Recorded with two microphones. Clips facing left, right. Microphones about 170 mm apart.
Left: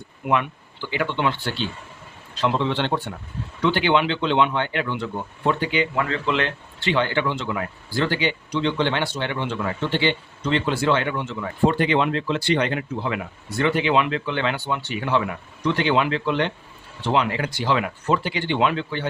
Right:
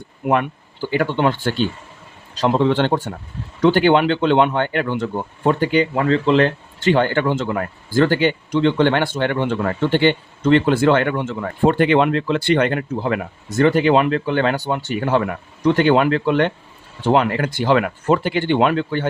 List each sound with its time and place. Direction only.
0.3 s speech: 45° right (ahead or behind)
5.9 s speech: 30° right (ahead or behind); by 19.0 s 50° right (ahead or behind)